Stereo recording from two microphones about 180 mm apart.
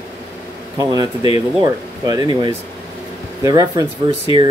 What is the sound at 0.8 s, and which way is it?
Speech, 20° right (ahead or behind).